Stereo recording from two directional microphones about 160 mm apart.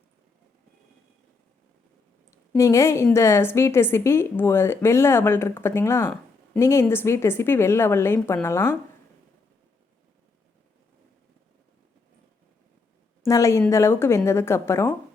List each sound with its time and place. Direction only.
2.6 s a woman's voice: 20° left (ahead or behind)
13.2 s a woman's voice: 20° left (ahead or behind)